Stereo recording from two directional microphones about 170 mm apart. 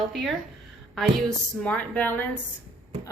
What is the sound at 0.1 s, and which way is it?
A woman's voice, centre (ahead or behind).